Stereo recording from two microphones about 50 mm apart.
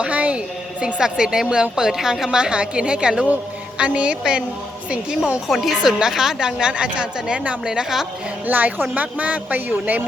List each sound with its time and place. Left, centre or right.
0.0 s a woman's voice: right
5.5 s a woman's voice: centre; by 7.5 s right
7.6 s a woman's voice: centre
8.4 s speech: right